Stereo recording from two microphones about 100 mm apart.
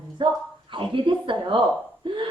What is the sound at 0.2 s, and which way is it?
A woman's voice, 50° right (ahead or behind).